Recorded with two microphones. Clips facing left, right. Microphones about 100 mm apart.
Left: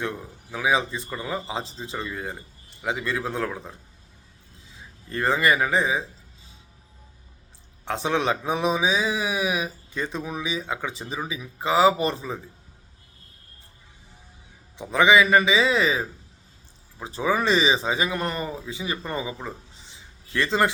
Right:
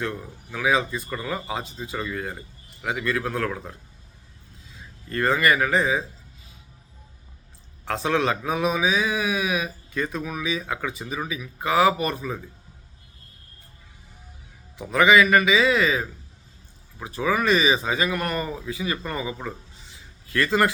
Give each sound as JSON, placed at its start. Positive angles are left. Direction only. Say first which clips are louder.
{"t": 0.5, "sound": "speech", "louder": "right 1 dB", "side_deg": 20}
{"t": 4.7, "sound": "a man's voice", "louder": "right 2 dB", "side_deg": 20}
{"t": 7.9, "sound": "speech", "louder": "right 1 dB", "side_deg": 20}
{"t": 14.8, "sound": "speech", "louder": "right 1 dB", "side_deg": 20}